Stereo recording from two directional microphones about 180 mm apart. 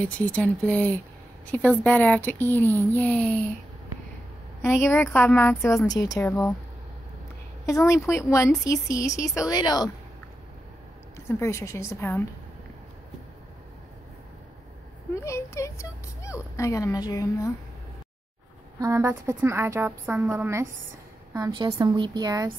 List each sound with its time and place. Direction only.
0.0 s speech: 10° left (ahead or behind)
4.6 s a woman's voice: 15° left (ahead or behind)
7.6 s a woman's voice: 15° left (ahead or behind)
11.1 s speech: 15° left (ahead or behind)
15.1 s speech: 15° left (ahead or behind)
18.8 s a woman's voice: 15° right (ahead or behind)